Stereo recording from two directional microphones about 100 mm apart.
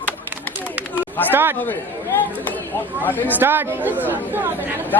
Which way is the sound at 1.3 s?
20° right (ahead or behind).